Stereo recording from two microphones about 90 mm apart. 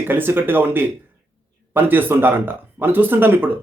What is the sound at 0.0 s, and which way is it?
Speech, 25° right (ahead or behind).